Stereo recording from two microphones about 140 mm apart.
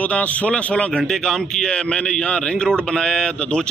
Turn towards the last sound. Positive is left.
turn(degrees=5)  # may be behind; listen again after turning